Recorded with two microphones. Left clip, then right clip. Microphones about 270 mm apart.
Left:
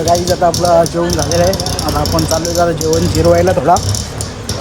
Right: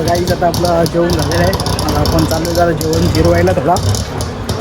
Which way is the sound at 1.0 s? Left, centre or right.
Centre.